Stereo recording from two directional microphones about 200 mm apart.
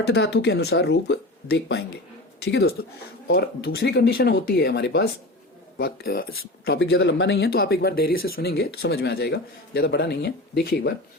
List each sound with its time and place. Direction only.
0.1 s speech: 60° left (ahead or behind)